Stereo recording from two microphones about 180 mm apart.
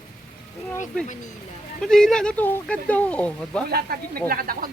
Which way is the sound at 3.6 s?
60° right (ahead or behind).